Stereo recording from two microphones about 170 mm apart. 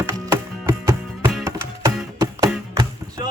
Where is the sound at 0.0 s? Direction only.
15° right (ahead or behind).